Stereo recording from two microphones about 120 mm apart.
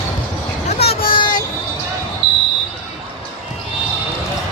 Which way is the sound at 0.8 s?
55° left (ahead or behind).